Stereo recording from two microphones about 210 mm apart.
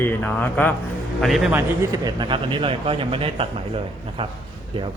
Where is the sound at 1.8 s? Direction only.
20° right (ahead or behind).